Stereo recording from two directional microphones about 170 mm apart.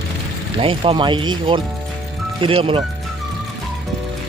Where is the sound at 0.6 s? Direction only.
30° right (ahead or behind).